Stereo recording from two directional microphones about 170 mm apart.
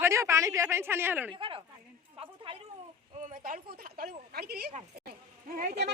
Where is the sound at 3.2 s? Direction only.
50° right (ahead or behind).